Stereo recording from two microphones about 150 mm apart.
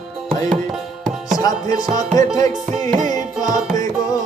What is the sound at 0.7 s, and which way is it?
Tabla, centre (ahead or behind).